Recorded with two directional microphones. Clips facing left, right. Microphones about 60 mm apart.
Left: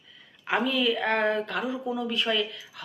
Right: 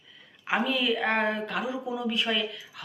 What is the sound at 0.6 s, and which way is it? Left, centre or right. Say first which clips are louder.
A woman's voice: left 1 dB; right.